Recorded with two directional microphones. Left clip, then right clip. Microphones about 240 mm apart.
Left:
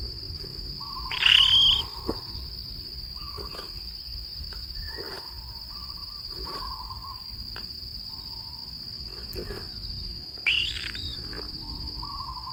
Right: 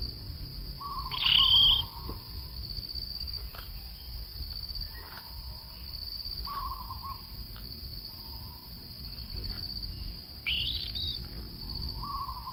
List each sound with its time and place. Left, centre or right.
1.1 s cricket: centre
10.4 s chirp: centre